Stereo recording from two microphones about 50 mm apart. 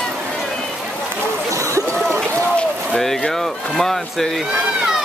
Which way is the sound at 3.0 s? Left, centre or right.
Centre.